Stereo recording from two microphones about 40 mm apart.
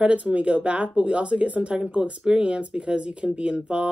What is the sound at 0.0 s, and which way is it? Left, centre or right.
Speech, right.